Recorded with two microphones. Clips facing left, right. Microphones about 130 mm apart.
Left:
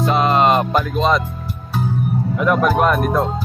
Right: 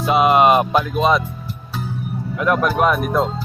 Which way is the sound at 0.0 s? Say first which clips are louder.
Right 1 dB; 10° right (ahead or behind).